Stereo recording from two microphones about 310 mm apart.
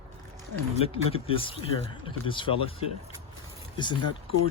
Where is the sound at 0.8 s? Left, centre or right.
Centre.